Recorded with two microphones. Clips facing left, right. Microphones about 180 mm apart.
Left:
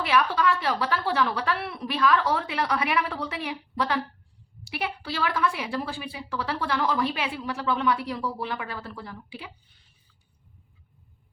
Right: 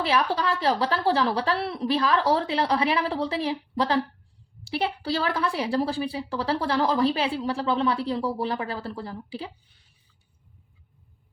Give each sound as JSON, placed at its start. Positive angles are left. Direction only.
{"t": 0.0, "sound": "a woman's voice", "side_deg": -30}